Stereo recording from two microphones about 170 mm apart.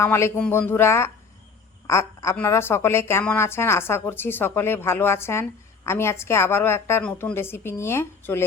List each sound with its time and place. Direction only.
0.0 s a woman's voice: 15° left (ahead or behind)